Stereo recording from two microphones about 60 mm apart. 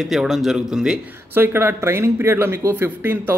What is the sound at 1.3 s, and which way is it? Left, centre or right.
A man's voice, right.